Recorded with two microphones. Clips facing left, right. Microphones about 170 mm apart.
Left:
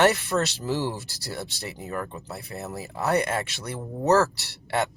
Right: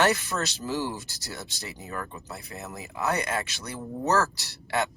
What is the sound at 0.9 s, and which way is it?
Speech, 30° left (ahead or behind).